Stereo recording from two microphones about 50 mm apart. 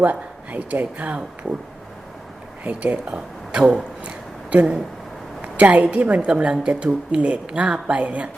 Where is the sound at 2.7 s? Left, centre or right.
Right.